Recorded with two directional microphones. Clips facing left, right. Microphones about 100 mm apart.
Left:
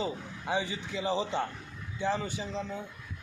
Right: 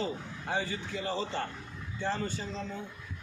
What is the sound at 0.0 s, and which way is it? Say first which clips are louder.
A man's voice: left 1 dB; 15° left (ahead or behind).